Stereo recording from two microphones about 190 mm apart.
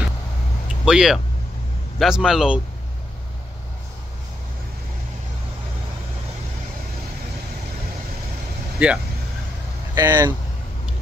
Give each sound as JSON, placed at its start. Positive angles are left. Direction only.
{"t": 0.8, "sound": "a man's voice", "side_deg": -5}
{"t": 8.7, "sound": "speech", "side_deg": -5}